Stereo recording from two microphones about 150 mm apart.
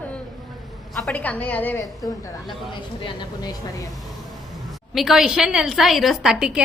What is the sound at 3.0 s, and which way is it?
Speech, 35° left (ahead or behind).